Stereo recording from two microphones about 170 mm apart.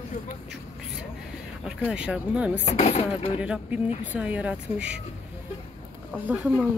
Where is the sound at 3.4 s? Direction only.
5° right (ahead or behind).